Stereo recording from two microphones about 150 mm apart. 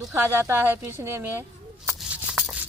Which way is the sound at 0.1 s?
15° right (ahead or behind).